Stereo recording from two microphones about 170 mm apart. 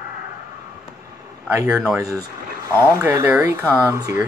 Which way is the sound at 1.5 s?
15° right (ahead or behind).